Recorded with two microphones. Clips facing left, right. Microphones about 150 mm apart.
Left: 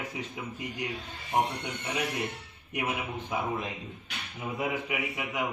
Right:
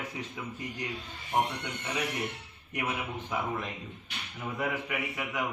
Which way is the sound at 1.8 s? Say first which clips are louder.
Left 1 dB; 25° left (ahead or behind).